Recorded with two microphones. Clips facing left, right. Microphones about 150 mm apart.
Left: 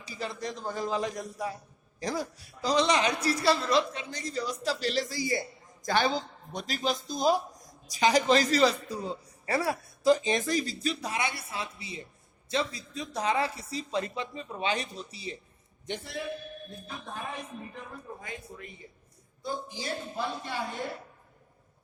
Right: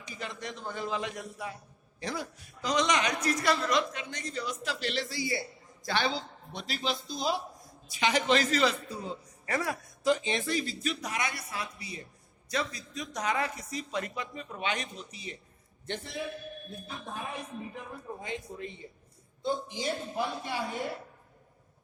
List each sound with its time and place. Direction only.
0.0 s a woman's voice: 35° left (ahead or behind)
18.2 s a man's voice: 25° right (ahead or behind)